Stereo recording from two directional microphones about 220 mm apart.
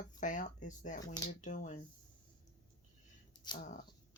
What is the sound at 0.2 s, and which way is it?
Speech, 35° left (ahead or behind).